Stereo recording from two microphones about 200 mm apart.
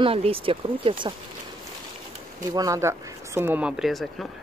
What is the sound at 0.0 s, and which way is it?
Speech, 30° right (ahead or behind).